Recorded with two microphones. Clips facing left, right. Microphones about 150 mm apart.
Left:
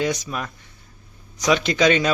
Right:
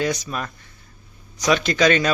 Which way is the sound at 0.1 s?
10° left (ahead or behind).